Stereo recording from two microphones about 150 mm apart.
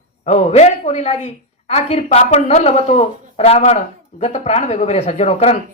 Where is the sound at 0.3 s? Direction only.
50° left (ahead or behind).